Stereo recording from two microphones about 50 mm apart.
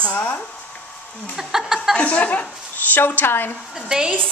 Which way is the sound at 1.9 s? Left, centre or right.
Left.